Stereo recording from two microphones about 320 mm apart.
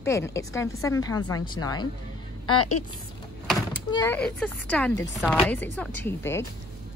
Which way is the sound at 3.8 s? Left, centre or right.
Centre.